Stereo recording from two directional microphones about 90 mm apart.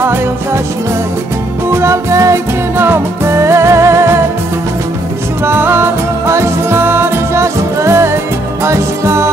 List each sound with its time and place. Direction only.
1.7 s music: 30° right (ahead or behind)
5.4 s music: 25° right (ahead or behind)